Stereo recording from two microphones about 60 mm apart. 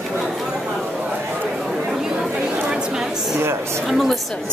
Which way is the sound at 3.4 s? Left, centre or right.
Right.